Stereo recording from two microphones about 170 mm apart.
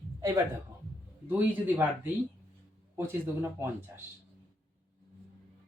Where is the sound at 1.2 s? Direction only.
10° right (ahead or behind).